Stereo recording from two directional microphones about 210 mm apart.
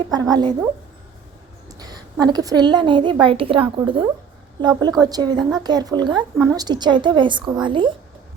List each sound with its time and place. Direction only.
0.1 s a child's voice: 20° right (ahead or behind)
1.8 s a child's voice: 20° right (ahead or behind)